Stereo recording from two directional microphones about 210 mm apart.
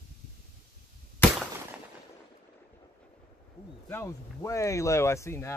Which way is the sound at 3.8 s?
15° left (ahead or behind).